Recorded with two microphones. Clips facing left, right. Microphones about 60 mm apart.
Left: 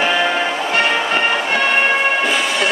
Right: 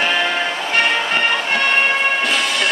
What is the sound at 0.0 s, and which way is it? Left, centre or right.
Music, centre.